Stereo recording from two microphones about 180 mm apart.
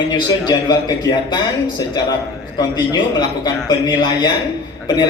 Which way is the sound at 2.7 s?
25° left (ahead or behind).